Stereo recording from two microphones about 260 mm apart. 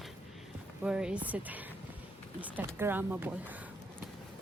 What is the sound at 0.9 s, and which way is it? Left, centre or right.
A woman's voice, centre.